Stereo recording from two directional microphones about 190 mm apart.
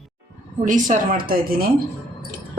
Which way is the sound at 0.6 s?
45° right (ahead or behind).